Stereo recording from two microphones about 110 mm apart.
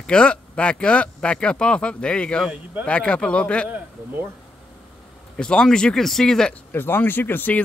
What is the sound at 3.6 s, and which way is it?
Speech, 15° right (ahead or behind).